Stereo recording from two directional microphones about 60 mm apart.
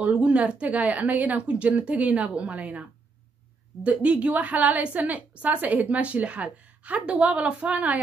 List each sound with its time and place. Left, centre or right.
0.0 s speech: right